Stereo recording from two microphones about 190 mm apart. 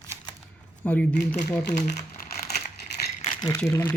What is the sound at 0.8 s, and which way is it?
Speech, 10° left (ahead or behind).